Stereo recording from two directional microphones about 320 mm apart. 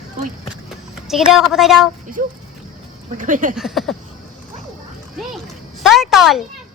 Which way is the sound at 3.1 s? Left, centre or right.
Right.